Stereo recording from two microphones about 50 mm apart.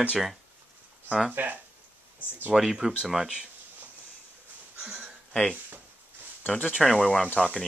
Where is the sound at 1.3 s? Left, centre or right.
Right.